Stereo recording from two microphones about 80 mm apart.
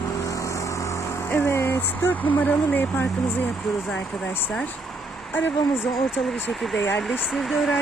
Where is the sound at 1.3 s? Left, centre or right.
Left.